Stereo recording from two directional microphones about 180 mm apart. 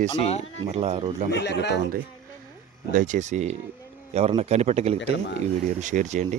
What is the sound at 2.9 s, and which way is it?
Speech, 45° right (ahead or behind).